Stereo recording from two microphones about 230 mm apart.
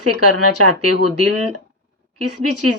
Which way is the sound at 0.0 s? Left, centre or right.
Right.